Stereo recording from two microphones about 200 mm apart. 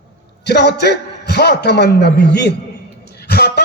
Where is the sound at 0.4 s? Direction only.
55° left (ahead or behind).